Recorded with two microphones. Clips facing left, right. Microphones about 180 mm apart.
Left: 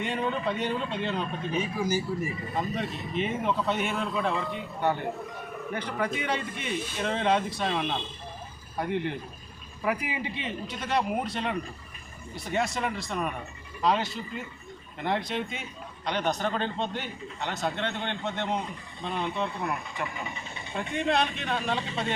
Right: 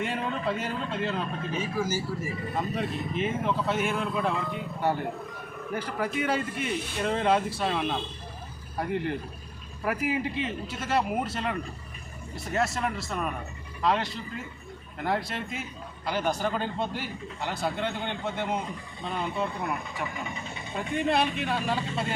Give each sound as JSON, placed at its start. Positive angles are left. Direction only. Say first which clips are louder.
{"t": 0.0, "sound": "speech", "louder": "left 1 dB", "side_deg": -5}
{"t": 1.8, "sound": "speech", "louder": "left 1 dB", "side_deg": 15}
{"t": 2.6, "sound": "speech", "louder": "right 1 dB", "side_deg": -5}